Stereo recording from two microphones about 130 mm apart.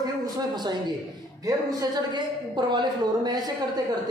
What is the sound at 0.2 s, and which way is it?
A man's voice, 30° right (ahead or behind).